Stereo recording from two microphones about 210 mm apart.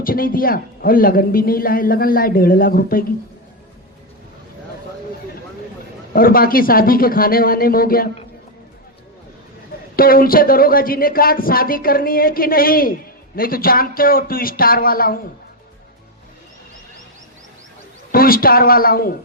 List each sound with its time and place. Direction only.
0.0 s a man's voice: 45° left (ahead or behind)
6.1 s a man's voice: 45° left (ahead or behind)
9.9 s a man's voice: 45° left (ahead or behind)
18.1 s a man's voice: 45° left (ahead or behind)